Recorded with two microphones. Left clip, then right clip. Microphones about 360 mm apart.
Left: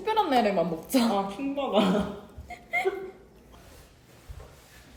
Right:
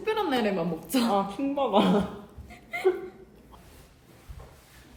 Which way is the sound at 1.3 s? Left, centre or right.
Centre.